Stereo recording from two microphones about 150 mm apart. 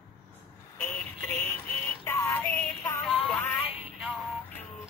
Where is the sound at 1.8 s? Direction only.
15° left (ahead or behind).